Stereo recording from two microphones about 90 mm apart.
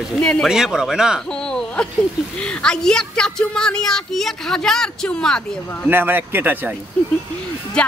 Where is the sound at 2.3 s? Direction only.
10° left (ahead or behind).